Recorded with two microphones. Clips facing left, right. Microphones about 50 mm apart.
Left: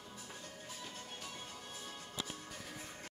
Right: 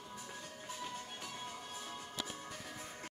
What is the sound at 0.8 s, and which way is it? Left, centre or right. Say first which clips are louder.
Music: right 5 dB; centre.